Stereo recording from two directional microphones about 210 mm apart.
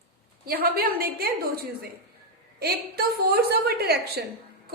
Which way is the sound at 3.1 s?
50° right (ahead or behind).